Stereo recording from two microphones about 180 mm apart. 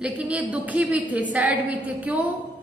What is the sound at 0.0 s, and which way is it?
A woman's voice, 5° right (ahead or behind).